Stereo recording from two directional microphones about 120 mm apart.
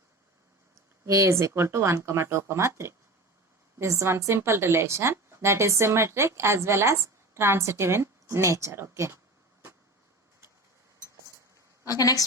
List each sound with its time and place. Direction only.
1.0 s a woman's voice: 25° right (ahead or behind)
11.9 s a woman's voice: 30° left (ahead or behind)